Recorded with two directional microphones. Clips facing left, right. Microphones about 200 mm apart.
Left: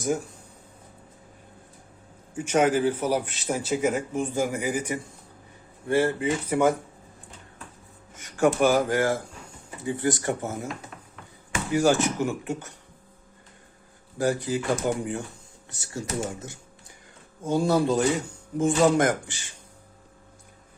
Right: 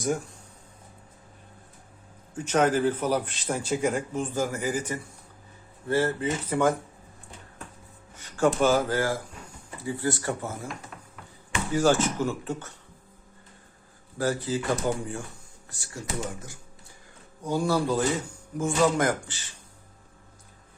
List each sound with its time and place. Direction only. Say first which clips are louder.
2.3 s a man's voice: left 1 dB; 10° left (ahead or behind)
8.1 s a man's voice: left 2 dB; 15° left (ahead or behind)
11.7 s a man's voice: left 1 dB; 15° left (ahead or behind)
14.2 s a man's voice: left 2 dB; 15° left (ahead or behind)